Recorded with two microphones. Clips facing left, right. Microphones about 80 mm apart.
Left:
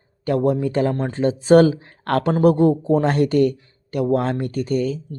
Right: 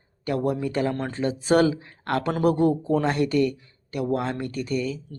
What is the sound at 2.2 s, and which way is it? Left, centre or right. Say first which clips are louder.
Speech: left 5 dB; left.